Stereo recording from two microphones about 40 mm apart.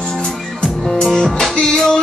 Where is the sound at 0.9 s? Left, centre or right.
Centre.